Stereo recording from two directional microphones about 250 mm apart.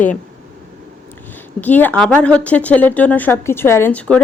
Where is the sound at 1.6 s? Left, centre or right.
Centre.